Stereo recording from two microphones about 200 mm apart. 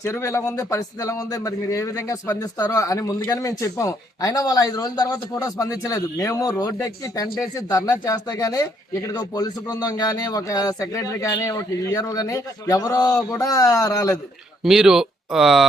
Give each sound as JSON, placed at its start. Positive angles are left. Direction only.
{"t": 0.0, "sound": "speech", "side_deg": 15}
{"t": 14.6, "sound": "speech", "side_deg": 0}